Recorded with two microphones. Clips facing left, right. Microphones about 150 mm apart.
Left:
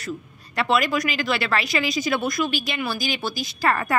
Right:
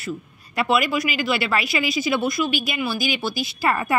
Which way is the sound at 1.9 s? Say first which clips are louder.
Right 2 dB; 45° left (ahead or behind).